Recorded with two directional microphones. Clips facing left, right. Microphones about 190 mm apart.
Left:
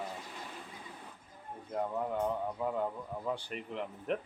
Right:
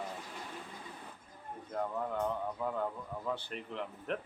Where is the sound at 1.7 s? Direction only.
10° left (ahead or behind).